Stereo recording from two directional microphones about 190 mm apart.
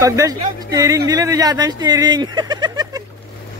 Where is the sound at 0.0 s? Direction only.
15° right (ahead or behind).